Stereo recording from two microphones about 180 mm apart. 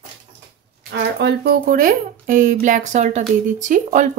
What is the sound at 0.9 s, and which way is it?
Speech, 65° right (ahead or behind).